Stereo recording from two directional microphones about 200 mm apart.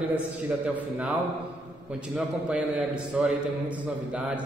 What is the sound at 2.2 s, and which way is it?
A man's voice, 5° right (ahead or behind).